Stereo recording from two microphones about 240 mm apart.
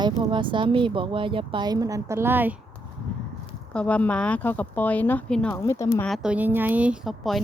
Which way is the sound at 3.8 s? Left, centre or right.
Centre.